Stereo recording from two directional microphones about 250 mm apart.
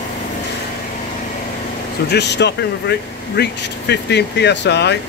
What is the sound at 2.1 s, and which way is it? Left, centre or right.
Speech, left.